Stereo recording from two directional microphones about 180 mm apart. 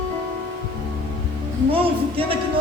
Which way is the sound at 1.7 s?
30° right (ahead or behind).